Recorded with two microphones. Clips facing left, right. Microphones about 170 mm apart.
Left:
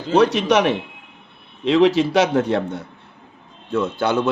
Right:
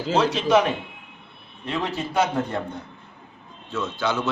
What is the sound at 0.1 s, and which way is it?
Speech, 65° left (ahead or behind).